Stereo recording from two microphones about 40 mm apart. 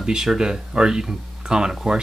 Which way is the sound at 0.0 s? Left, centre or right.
Centre.